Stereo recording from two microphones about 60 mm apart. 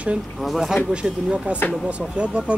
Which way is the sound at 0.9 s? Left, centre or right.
Centre.